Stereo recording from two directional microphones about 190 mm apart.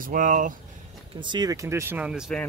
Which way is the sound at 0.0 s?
45° right (ahead or behind).